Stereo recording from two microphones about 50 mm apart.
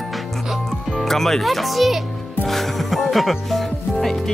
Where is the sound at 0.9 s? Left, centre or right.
Centre.